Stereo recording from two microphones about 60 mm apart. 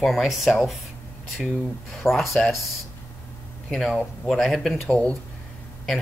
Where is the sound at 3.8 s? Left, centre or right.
Centre.